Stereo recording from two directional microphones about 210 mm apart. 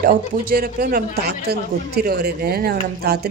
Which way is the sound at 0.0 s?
40° right (ahead or behind).